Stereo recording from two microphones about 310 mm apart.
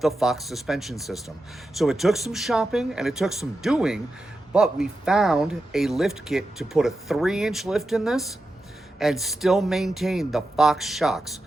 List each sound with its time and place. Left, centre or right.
0.0 s speech: centre